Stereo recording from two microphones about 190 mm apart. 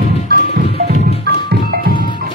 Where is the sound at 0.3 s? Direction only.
50° right (ahead or behind).